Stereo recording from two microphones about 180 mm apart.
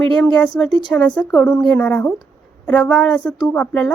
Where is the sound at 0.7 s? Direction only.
25° left (ahead or behind).